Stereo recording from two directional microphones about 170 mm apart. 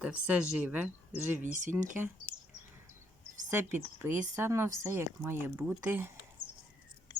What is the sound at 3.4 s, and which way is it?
Speech, 10° right (ahead or behind).